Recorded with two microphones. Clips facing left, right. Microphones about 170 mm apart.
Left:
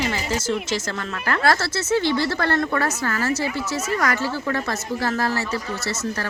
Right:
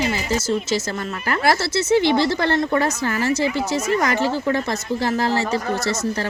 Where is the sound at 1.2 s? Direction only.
15° right (ahead or behind).